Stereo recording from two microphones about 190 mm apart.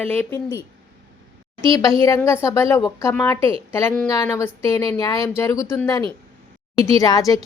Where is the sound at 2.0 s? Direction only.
15° left (ahead or behind).